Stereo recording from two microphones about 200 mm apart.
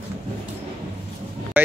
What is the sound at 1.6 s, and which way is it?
Vehicle, 10° right (ahead or behind).